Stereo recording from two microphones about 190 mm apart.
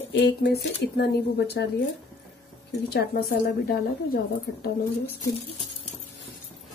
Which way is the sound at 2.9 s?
55° left (ahead or behind).